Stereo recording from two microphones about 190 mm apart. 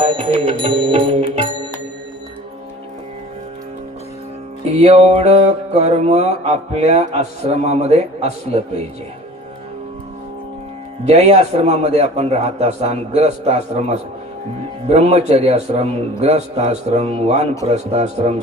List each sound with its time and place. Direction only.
0.0 s music: 25° right (ahead or behind)
4.7 s music: 35° right (ahead or behind)
11.0 s music: 35° right (ahead or behind)